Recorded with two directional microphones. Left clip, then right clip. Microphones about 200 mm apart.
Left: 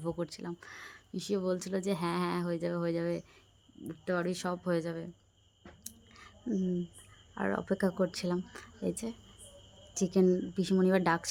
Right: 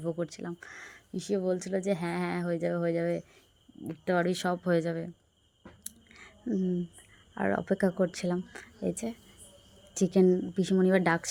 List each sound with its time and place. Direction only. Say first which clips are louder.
0.0 s speech: right 3 dB; 5° right (ahead or behind)
5.8 s chewing: right 2 dB; 15° right (ahead or behind)
7.3 s speech: right 4 dB; 10° right (ahead or behind)